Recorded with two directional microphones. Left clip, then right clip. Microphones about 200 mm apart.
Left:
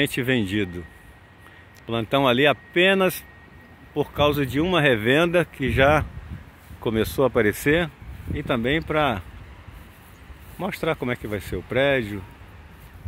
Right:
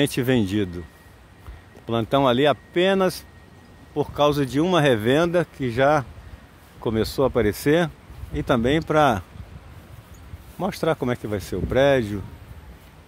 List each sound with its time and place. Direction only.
0.0 s speech: 15° right (ahead or behind)
1.9 s speech: 10° right (ahead or behind)
7.6 s speech: 15° right (ahead or behind)
10.6 s speech: 15° right (ahead or behind)